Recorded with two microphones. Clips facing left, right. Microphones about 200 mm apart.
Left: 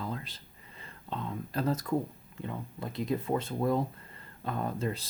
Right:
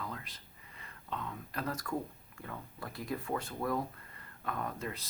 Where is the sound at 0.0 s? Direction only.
30° left (ahead or behind).